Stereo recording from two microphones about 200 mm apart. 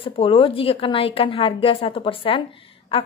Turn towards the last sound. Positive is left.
turn(degrees=25)  # may be behind; listen again after turning